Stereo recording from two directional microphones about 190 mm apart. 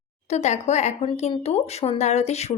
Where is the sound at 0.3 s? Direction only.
35° left (ahead or behind).